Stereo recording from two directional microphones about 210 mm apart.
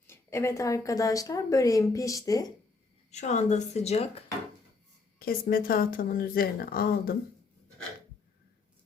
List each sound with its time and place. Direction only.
0.1 s a woman's voice: 10° left (ahead or behind)
3.1 s a woman's voice: 35° left (ahead or behind)
5.2 s speech: 45° left (ahead or behind)